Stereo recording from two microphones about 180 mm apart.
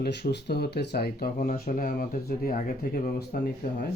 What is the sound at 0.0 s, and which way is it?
Speech, 70° left (ahead or behind).